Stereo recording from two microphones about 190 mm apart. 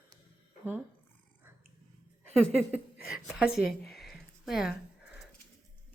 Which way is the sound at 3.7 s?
Centre (ahead or behind).